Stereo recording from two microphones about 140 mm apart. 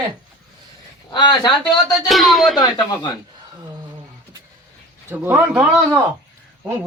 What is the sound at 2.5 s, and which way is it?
Speech, 30° left (ahead or behind).